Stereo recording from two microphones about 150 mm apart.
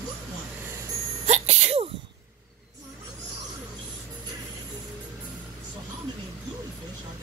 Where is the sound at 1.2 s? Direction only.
50° right (ahead or behind).